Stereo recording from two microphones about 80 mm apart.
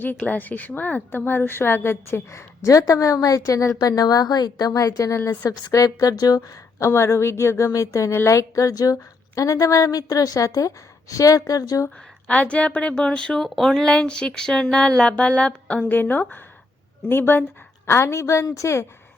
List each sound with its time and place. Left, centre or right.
0.3 s a woman's voice: left
12.3 s a woman's voice: centre; by 18.9 s left